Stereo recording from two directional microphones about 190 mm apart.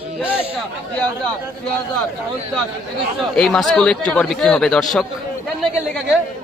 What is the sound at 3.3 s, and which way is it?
Speech, centre (ahead or behind).